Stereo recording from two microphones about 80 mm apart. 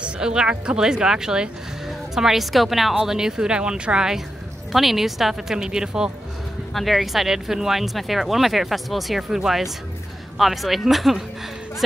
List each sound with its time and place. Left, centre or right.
0.0 s speech: centre